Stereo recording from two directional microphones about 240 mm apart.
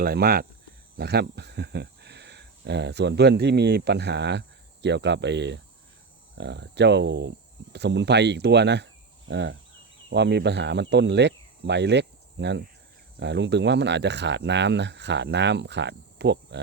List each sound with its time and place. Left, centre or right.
0.0 s speech: right